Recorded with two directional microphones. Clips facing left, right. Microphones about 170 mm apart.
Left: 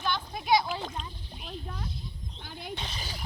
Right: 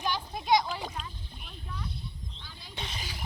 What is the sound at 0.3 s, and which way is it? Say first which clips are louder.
Splash: even; 5° left (ahead or behind).